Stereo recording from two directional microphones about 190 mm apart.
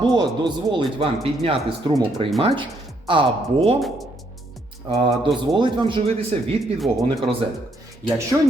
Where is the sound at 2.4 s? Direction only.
30° right (ahead or behind).